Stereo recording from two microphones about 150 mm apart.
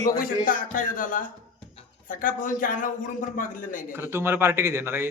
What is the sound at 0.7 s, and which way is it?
Speech, 65° left (ahead or behind).